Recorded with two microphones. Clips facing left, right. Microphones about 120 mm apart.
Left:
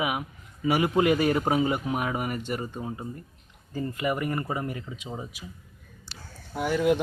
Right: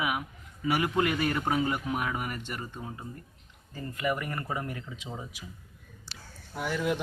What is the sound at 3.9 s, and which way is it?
Speech, 15° left (ahead or behind).